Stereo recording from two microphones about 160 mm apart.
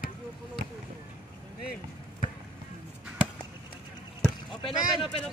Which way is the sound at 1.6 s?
70° left (ahead or behind).